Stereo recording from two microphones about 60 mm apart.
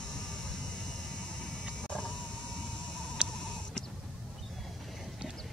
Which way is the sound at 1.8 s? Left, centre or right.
Centre.